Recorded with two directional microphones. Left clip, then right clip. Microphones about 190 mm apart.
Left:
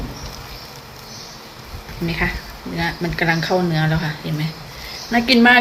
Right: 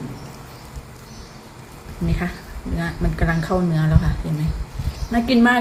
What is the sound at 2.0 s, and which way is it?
A woman's voice, 15° right (ahead or behind).